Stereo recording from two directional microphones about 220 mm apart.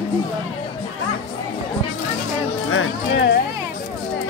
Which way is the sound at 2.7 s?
50° left (ahead or behind).